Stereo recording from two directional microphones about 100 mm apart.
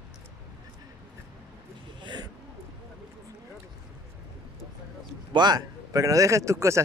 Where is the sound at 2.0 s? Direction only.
45° right (ahead or behind).